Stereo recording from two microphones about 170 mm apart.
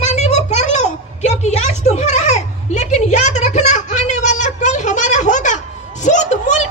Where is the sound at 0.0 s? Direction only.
40° left (ahead or behind).